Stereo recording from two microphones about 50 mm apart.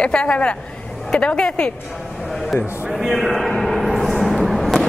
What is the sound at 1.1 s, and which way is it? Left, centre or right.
Speech, centre.